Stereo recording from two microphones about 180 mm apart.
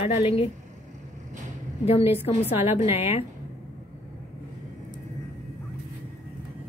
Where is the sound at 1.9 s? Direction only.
35° left (ahead or behind).